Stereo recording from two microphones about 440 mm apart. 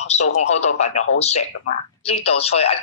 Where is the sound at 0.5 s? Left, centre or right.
Centre.